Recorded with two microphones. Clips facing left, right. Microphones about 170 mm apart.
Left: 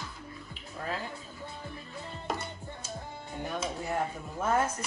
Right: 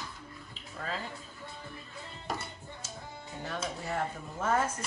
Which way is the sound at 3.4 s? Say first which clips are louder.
Left 3 dB; 15° left (ahead or behind).